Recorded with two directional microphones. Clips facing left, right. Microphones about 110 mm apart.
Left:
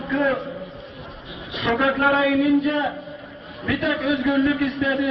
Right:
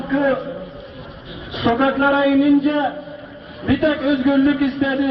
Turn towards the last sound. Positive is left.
turn(degrees=-25)  # may be behind; listen again after turning